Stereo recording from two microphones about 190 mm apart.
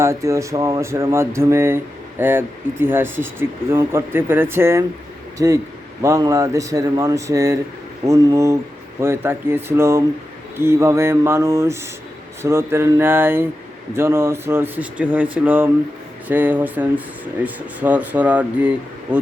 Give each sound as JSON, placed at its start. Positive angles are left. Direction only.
{"t": 0.0, "sound": "speech", "side_deg": -15}